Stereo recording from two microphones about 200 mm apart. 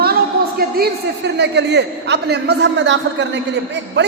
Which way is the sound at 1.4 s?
60° right (ahead or behind).